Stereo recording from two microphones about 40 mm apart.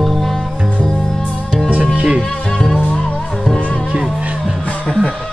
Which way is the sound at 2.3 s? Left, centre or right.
Centre.